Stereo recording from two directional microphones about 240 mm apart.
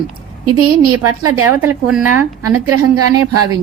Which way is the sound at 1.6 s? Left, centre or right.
Centre.